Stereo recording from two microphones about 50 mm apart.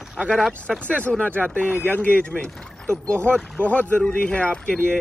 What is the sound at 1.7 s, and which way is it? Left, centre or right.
Speech, left.